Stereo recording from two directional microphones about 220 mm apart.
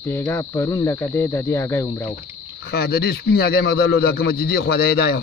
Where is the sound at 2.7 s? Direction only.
45° left (ahead or behind).